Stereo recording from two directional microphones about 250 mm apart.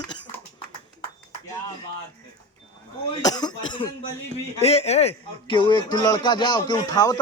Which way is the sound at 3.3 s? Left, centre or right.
Centre.